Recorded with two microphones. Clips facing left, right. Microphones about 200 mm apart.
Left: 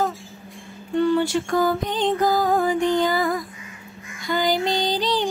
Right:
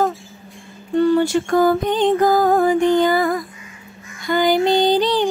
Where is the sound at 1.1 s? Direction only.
45° right (ahead or behind).